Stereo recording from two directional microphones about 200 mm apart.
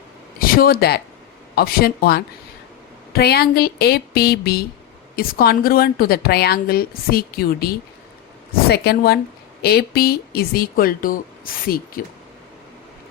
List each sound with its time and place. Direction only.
0.3 s a woman's voice: 45° left (ahead or behind)